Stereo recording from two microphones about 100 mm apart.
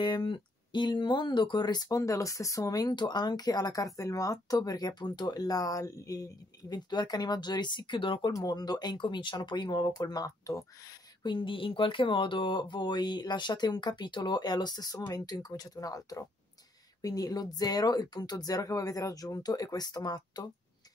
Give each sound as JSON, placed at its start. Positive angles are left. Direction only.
{"t": 0.0, "sound": "speech", "side_deg": 55}
{"t": 8.3, "sound": "speech", "side_deg": 40}
{"t": 11.2, "sound": "speech", "side_deg": 55}